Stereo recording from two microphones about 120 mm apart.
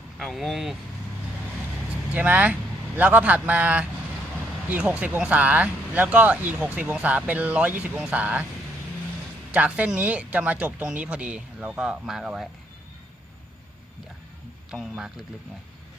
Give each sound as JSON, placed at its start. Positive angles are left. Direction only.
{"t": 0.2, "sound": "speech", "side_deg": 0}
{"t": 2.1, "sound": "speech", "side_deg": -10}
{"t": 9.5, "sound": "speech", "side_deg": -10}
{"t": 14.7, "sound": "speech", "side_deg": -5}